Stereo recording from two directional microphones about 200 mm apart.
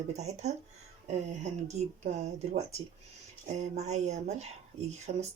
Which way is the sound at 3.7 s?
35° right (ahead or behind).